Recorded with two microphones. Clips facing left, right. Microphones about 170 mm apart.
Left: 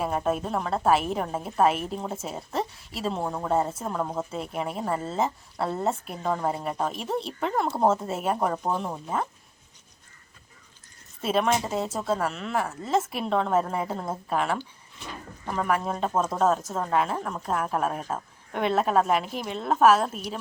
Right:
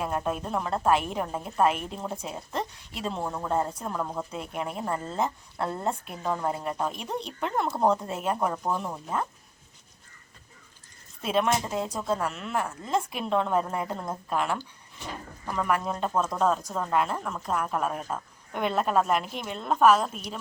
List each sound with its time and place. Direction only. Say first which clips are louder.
0.0 s speech: left 3 dB; 5° left (ahead or behind)
3.2 s a woman's voice: left 2 dB; 15° left (ahead or behind)
3.9 s speech: left 3 dB; 20° left (ahead or behind)
4.3 s a woman's voice: left 2 dB; centre (ahead or behind)
11.2 s speech: left 1 dB; centre (ahead or behind)
15.6 s speech: left 1 dB; centre (ahead or behind)